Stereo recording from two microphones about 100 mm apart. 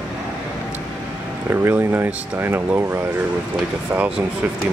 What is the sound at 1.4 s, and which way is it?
Speech, 20° right (ahead or behind).